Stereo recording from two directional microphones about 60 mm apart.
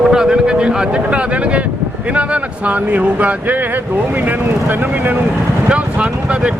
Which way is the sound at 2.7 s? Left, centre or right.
Right.